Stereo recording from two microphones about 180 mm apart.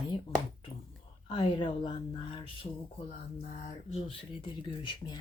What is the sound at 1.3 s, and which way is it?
Speech, 30° left (ahead or behind).